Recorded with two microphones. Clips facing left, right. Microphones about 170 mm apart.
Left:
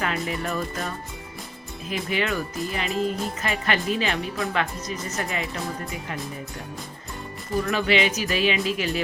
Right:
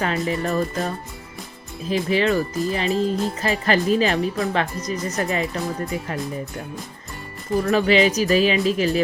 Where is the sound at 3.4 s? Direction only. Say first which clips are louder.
Right 5 dB; 35° right (ahead or behind).